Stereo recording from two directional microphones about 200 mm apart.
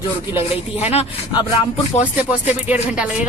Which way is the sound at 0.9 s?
30° left (ahead or behind).